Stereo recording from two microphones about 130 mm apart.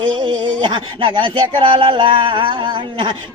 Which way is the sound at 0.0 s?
35° right (ahead or behind).